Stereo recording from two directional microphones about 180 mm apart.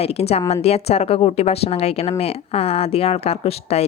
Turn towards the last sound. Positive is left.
turn(degrees=35)  # may be behind; listen again after turning